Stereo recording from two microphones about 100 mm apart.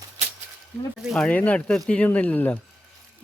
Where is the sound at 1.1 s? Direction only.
10° left (ahead or behind).